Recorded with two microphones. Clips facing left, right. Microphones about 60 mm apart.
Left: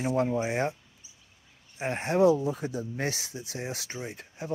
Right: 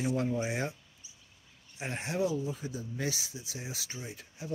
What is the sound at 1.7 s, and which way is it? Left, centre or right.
Speech, left.